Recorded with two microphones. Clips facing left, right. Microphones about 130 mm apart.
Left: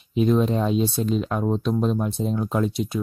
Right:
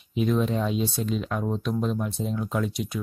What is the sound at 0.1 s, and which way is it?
Speech, 35° left (ahead or behind).